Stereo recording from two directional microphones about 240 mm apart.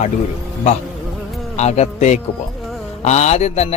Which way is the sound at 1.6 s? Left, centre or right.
Left.